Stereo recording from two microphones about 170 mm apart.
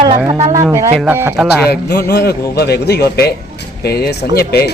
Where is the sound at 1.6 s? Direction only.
70° left (ahead or behind).